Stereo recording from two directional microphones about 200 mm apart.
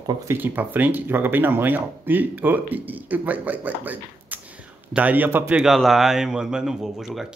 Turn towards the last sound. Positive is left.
turn(degrees=0)  # may be behind; listen again after turning